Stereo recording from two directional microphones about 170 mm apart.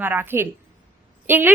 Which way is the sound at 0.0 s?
10° right (ahead or behind).